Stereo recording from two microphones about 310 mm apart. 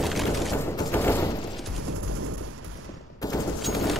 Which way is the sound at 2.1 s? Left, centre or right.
Right.